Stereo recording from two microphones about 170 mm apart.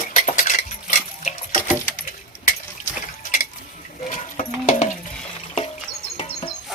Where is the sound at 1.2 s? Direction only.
45° left (ahead or behind).